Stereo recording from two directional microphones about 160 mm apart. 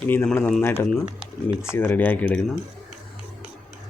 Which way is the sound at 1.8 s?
10° left (ahead or behind).